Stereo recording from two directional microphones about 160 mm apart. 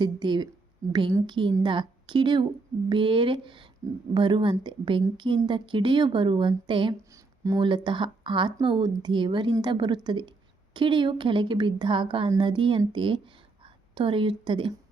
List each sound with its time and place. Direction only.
0.0 s a woman's voice: 30° right (ahead or behind)